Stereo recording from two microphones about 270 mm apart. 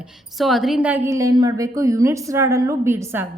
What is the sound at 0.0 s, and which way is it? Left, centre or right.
A woman's voice, centre.